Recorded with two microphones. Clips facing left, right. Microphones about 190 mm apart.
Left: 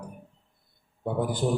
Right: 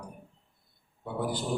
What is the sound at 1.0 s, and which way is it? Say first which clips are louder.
Speech: left 5 dB; 50° left (ahead or behind).